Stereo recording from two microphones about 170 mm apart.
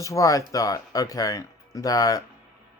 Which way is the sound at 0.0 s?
20° left (ahead or behind).